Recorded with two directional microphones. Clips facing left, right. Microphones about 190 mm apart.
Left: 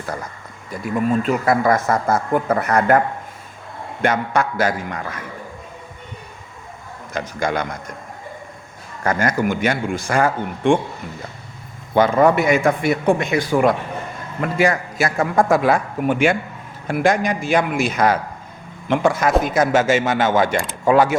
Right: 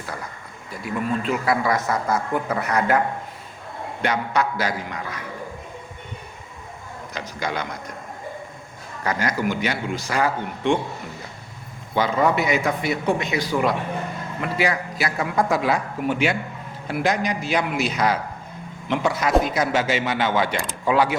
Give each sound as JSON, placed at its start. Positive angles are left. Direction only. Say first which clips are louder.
{"t": 1.2, "sound": "a man's voice", "louder": "left 5 dB", "side_deg": 45}
{"t": 4.0, "sound": "a man's voice", "louder": "left 4 dB", "side_deg": 50}
{"t": 7.1, "sound": "a man's voice", "louder": "left 6 dB", "side_deg": 50}
{"t": 9.0, "sound": "a man's voice", "louder": "left 4 dB", "side_deg": 50}
{"t": 11.9, "sound": "a man's voice", "louder": "left 6 dB", "side_deg": 50}